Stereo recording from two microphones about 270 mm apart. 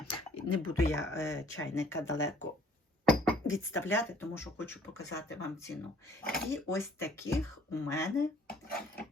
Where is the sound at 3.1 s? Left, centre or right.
Centre.